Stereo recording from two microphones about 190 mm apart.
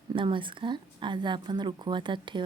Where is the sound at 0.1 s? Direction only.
25° right (ahead or behind).